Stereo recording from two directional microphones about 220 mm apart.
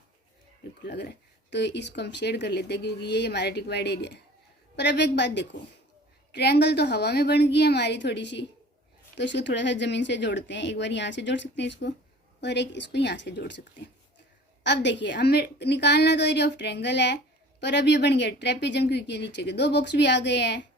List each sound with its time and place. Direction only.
0.9 s speech: 50° left (ahead or behind)
14.6 s speech: 50° left (ahead or behind)